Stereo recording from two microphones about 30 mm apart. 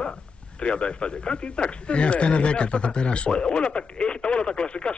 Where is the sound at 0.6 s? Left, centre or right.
Left.